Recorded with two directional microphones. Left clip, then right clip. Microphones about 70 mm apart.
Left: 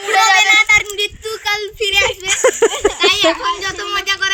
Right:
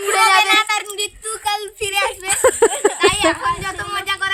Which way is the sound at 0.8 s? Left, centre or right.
Right.